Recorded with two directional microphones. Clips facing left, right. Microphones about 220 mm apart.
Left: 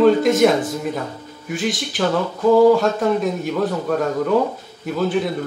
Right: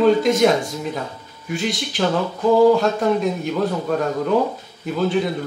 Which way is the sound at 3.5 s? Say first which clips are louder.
Left 1 dB; centre (ahead or behind).